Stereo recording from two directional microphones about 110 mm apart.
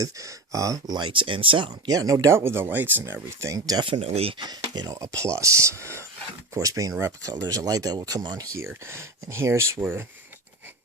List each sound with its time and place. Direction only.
0.0 s speech: 30° right (ahead or behind); by 1.7 s 50° right (ahead or behind)
1.9 s speech: 30° right (ahead or behind)
3.8 s speech: 60° right (ahead or behind)
4.4 s speech: 40° right (ahead or behind)
8.5 s speech: 25° right (ahead or behind)